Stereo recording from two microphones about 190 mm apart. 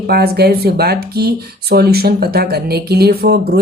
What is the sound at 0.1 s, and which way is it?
Speech, 55° right (ahead or behind).